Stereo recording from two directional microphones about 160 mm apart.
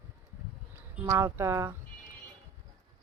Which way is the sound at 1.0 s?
20° right (ahead or behind).